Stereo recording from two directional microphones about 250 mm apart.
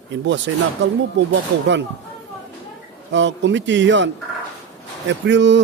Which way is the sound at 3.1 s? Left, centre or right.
Right.